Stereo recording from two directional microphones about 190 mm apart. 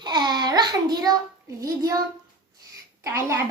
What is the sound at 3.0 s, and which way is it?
Speech, 15° right (ahead or behind).